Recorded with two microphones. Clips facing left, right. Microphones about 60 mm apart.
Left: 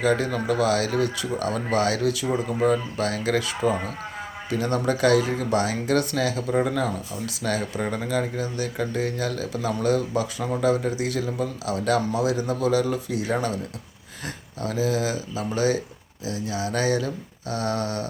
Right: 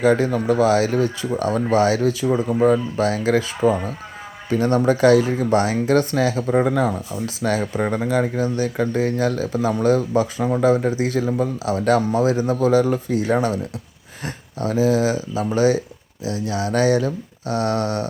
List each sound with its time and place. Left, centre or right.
0.0 s speech: right
16.2 s speech: right